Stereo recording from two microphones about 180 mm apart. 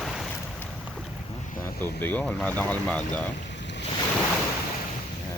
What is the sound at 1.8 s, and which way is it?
Speech, 10° left (ahead or behind).